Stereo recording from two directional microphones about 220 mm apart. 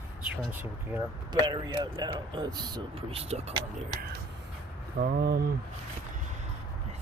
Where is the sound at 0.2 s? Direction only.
5° right (ahead or behind).